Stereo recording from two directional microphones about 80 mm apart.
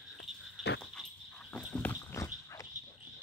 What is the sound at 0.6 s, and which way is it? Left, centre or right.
Dog, centre.